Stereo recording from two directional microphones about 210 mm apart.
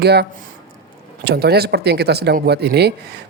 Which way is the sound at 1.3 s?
50° right (ahead or behind).